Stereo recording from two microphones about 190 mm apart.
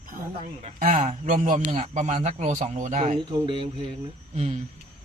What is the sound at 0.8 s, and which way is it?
Speech, 40° right (ahead or behind).